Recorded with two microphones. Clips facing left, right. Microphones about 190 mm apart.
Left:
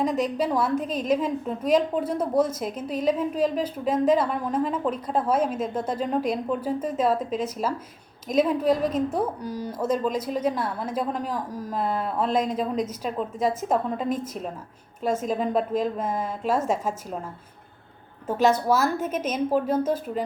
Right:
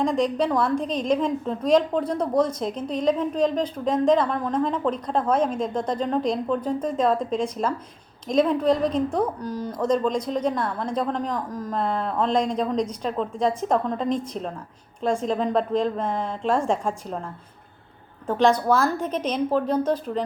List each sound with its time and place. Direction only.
0.0 s a woman's voice: 5° left (ahead or behind)
18.3 s a woman's voice: 5° left (ahead or behind)